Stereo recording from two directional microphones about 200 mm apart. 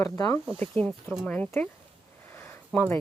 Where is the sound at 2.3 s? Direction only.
10° left (ahead or behind).